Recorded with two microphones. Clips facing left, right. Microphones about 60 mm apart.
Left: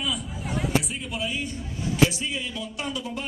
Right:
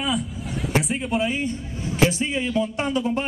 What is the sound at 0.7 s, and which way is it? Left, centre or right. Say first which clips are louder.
Speech: right 5 dB; right.